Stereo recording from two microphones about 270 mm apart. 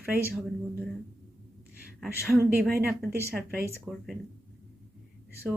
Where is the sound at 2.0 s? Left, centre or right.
Centre.